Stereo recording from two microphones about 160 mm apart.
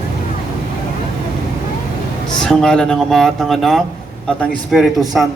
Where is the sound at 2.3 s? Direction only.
5° left (ahead or behind).